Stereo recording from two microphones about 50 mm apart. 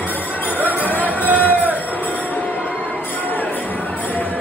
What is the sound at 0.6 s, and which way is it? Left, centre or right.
Music, left.